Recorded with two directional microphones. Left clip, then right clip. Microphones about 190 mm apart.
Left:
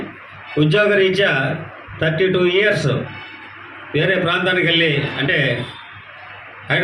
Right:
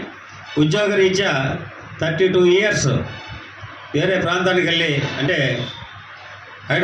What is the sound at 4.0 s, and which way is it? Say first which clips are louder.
Speech: left 1 dB; 60° right (ahead or behind).